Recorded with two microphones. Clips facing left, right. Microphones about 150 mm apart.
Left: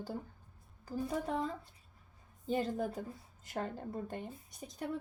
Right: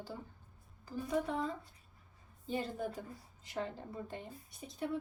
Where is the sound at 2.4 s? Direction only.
45° left (ahead or behind).